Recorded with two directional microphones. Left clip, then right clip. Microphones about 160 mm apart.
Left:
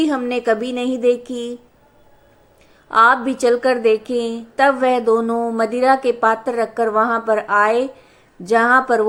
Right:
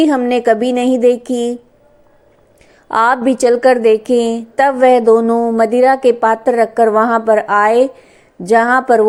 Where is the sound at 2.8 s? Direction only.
35° right (ahead or behind).